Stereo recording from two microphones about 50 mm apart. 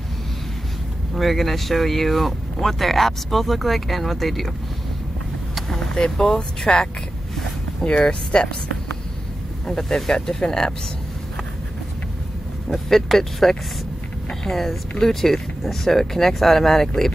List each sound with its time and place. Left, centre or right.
1.1 s speech: centre
5.7 s speech: centre
8.0 s speech: centre
9.7 s speech: centre
12.6 s speech: centre